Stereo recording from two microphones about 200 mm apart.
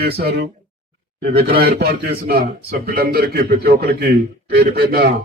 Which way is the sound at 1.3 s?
50° right (ahead or behind).